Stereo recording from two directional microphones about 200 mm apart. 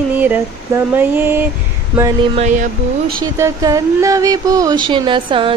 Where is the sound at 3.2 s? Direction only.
15° right (ahead or behind).